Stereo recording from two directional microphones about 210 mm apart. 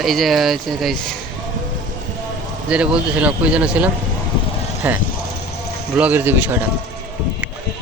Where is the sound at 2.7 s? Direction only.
5° right (ahead or behind).